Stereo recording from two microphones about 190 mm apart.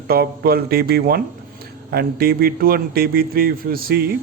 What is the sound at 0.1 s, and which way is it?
A man's voice, 55° right (ahead or behind).